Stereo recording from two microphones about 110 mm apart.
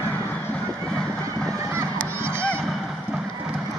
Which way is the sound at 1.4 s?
30° right (ahead or behind).